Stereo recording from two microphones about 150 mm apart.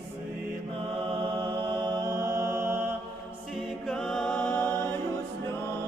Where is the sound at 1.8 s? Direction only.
25° right (ahead or behind).